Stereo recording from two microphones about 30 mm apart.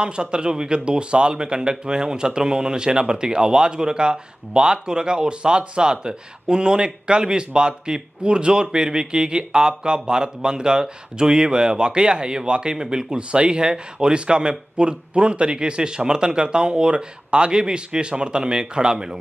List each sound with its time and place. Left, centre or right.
0.0 s a man's voice: right